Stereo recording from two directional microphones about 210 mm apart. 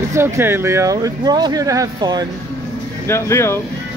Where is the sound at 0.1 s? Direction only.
10° right (ahead or behind).